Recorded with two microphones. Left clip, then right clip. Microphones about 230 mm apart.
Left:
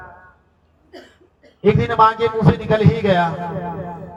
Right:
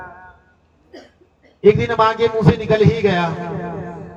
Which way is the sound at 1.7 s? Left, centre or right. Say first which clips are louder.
Even; centre.